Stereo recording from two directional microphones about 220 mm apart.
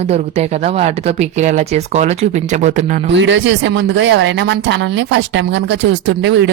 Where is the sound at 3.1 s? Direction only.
55° right (ahead or behind).